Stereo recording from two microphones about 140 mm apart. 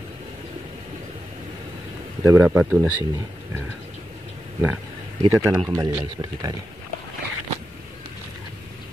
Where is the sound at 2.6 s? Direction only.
5° right (ahead or behind).